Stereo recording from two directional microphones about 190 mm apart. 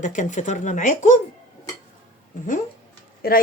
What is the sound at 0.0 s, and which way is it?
Speech, 40° left (ahead or behind).